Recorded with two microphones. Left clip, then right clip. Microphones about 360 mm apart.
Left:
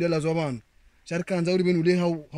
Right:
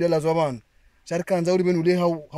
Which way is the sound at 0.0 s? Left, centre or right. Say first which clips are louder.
Right 5 dB; centre.